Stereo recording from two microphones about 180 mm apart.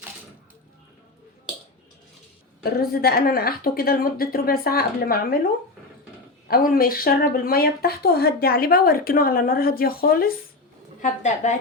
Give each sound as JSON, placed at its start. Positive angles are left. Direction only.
{"t": 2.9, "sound": "speech", "side_deg": 60}
{"t": 6.5, "sound": "speech", "side_deg": 55}
{"t": 11.0, "sound": "a woman's voice", "side_deg": 40}